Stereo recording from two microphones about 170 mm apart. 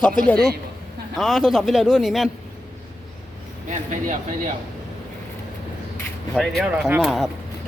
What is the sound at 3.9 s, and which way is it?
Speech, 50° right (ahead or behind).